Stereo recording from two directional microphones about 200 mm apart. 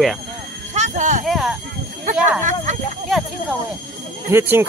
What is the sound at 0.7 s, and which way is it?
Speech, 35° right (ahead or behind).